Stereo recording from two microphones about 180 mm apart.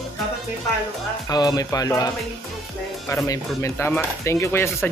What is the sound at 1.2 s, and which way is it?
Speech, 20° left (ahead or behind).